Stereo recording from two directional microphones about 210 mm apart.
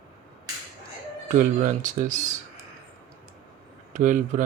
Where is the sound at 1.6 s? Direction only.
35° right (ahead or behind).